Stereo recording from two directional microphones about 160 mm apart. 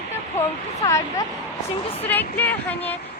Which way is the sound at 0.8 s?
25° left (ahead or behind).